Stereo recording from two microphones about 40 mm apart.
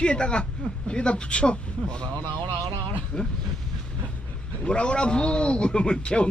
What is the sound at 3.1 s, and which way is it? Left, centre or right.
Speech, left.